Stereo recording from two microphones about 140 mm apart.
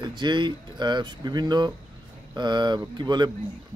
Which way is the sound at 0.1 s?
35° right (ahead or behind).